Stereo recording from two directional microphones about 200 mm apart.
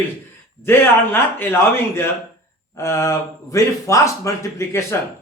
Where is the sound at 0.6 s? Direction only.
10° left (ahead or behind).